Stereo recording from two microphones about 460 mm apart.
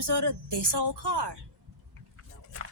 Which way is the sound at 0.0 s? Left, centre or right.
Right.